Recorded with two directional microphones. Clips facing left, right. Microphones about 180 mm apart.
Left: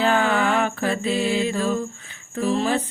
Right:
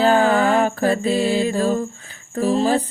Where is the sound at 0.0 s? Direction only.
35° right (ahead or behind).